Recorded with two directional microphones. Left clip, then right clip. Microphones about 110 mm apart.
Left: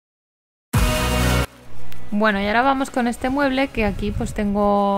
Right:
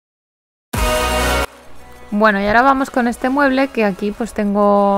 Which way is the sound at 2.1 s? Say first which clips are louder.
Right 6 dB; 20° right (ahead or behind).